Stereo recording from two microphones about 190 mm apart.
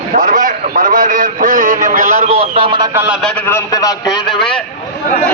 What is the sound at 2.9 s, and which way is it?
Speech, 10° right (ahead or behind).